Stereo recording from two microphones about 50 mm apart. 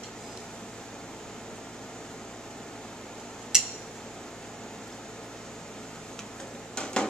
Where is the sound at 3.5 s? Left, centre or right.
Centre.